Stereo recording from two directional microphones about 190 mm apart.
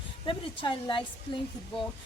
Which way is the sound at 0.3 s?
25° left (ahead or behind).